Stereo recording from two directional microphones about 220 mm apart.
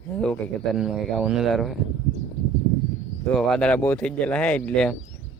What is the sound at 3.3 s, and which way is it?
Speech, 5° left (ahead or behind).